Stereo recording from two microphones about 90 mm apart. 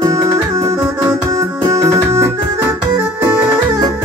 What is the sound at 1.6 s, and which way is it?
Music, 35° right (ahead or behind).